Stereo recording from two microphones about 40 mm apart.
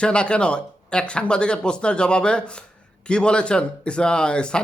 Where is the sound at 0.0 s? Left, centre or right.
Left.